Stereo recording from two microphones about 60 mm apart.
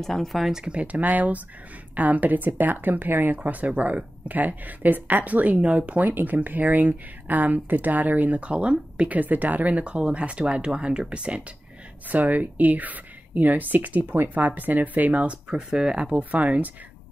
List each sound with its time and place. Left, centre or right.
0.0 s speech: centre; by 3.5 s right
3.6 s speech: right
6.0 s speech: right; by 9.2 s centre
9.2 s speech: right